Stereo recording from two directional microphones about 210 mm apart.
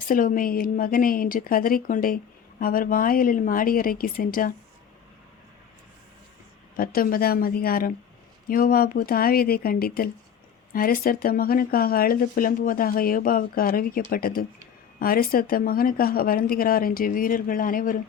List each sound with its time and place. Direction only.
0.1 s speech: 40° left (ahead or behind)
6.7 s speech: 45° left (ahead or behind)